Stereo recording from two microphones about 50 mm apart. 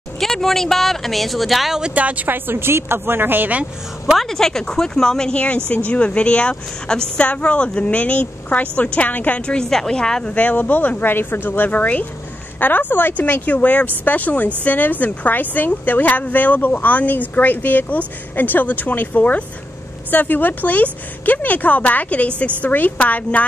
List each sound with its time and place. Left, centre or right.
0.2 s speech: centre
2.0 s a woman's voice: right
2.2 s speech: right
4.2 s speech: centre
5.9 s speech: left
9.5 s speech: centre
10.3 s speech: left